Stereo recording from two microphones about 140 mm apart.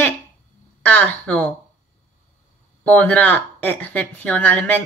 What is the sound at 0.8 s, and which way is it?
Speech, 10° left (ahead or behind).